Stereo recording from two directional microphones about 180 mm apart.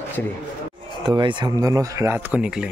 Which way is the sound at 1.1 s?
25° right (ahead or behind).